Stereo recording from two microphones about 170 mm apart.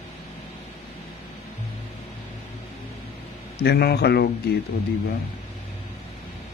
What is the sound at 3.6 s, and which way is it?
Speech, 70° left (ahead or behind).